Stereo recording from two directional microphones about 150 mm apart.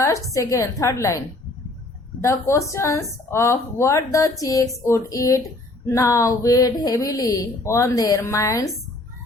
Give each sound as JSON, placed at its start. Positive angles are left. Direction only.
{"t": 0.0, "sound": "speech", "side_deg": 20}
{"t": 2.2, "sound": "speech", "side_deg": 20}